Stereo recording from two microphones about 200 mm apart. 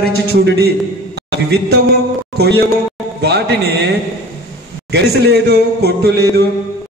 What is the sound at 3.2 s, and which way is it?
Speech, 55° right (ahead or behind).